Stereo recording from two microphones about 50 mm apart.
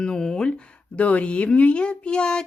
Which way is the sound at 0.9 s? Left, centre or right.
Left.